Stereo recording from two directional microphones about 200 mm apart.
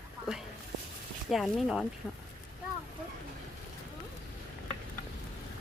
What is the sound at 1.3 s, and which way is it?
Speech, centre (ahead or behind).